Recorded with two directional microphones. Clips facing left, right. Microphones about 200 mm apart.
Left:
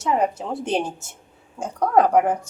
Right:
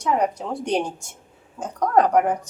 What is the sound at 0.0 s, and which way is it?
Speech, 5° left (ahead or behind).